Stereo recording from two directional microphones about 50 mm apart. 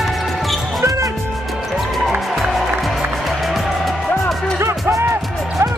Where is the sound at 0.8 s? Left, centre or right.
Right.